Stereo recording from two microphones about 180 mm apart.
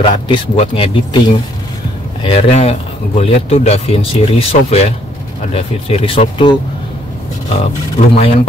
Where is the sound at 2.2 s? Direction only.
35° left (ahead or behind).